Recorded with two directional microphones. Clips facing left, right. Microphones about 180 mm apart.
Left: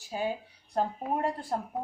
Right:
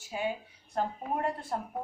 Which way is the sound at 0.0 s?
35° left (ahead or behind).